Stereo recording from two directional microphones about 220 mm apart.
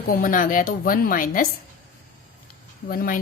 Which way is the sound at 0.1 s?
40° left (ahead or behind).